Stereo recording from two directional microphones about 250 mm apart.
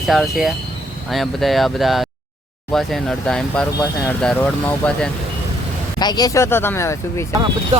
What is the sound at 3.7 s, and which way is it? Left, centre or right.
Speech, centre.